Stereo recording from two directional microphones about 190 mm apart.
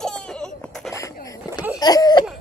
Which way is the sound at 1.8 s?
20° left (ahead or behind).